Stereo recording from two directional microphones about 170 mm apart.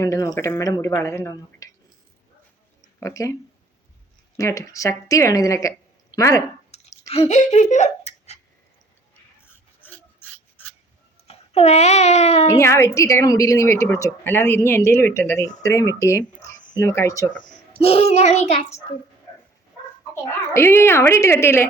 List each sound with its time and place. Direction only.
0.0 s a woman's voice: 20° left (ahead or behind)
3.0 s speech: 20° left (ahead or behind)
4.4 s a woman's voice: 20° left (ahead or behind)
6.7 s clicking: 40° left (ahead or behind)
7.1 s speech: 40° left (ahead or behind)
9.8 s filing: 10° left (ahead or behind)
11.3 s a child's voice: 40° left (ahead or behind)
12.5 s a woman's voice: 15° left (ahead or behind)
17.8 s a child's voice: 40° left (ahead or behind)
20.5 s a woman's voice: 15° left (ahead or behind)